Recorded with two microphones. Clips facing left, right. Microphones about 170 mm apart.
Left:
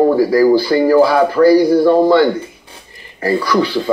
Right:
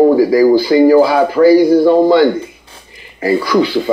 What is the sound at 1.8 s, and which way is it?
A man's voice, 15° right (ahead or behind).